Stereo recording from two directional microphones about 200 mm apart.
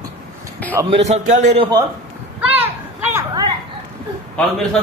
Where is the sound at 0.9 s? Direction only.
35° right (ahead or behind).